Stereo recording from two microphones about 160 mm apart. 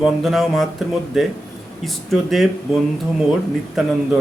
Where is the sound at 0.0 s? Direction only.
Centre (ahead or behind).